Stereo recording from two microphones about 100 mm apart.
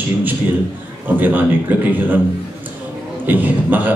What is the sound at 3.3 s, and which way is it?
Speech, 20° right (ahead or behind).